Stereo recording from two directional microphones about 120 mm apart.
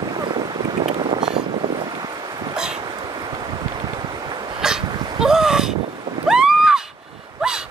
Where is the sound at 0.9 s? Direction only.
40° right (ahead or behind).